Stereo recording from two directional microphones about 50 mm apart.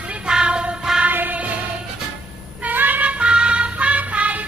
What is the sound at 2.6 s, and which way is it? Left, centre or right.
Music, right.